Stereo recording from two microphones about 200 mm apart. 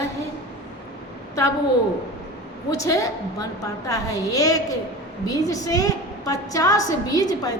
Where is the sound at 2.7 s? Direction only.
15° left (ahead or behind).